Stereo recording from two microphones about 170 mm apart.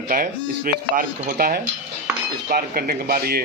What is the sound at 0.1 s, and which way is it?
Speech, 55° right (ahead or behind).